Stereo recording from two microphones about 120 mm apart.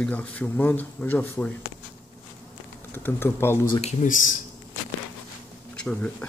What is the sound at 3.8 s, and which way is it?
Speech, 80° left.